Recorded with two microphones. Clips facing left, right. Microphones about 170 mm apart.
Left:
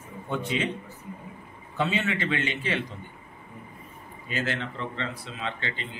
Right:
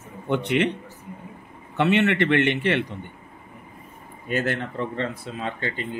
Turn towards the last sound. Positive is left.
turn(degrees=-45)  # may be behind; listen again after turning